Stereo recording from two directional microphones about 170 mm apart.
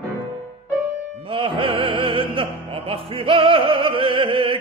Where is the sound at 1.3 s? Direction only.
30° right (ahead or behind).